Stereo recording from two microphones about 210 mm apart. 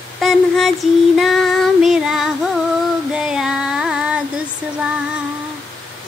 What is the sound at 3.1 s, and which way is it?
Female singing, 5° right (ahead or behind).